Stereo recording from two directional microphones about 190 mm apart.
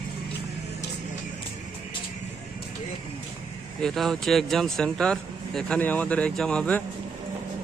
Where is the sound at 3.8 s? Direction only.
Centre (ahead or behind).